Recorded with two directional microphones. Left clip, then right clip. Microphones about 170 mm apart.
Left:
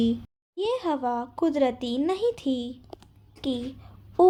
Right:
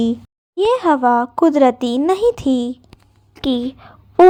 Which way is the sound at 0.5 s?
40° right (ahead or behind).